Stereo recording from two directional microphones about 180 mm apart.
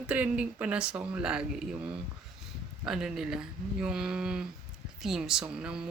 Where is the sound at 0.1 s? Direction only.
5° right (ahead or behind).